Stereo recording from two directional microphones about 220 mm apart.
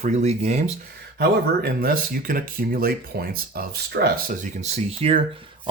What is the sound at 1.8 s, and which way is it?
Speech, 40° right (ahead or behind).